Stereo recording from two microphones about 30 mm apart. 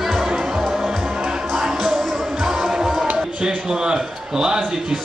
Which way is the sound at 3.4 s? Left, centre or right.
Right.